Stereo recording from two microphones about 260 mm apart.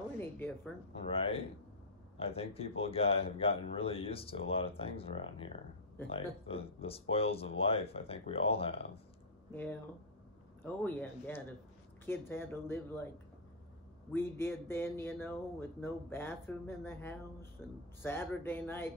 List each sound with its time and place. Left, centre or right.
0.2 s speech: centre
1.0 s speech: left
9.5 s speech: centre
14.1 s speech: centre